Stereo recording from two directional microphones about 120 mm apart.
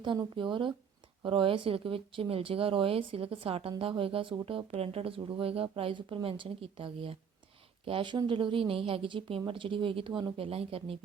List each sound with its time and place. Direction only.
0.3 s speech: 45° right (ahead or behind)
10.3 s speech: 55° right (ahead or behind)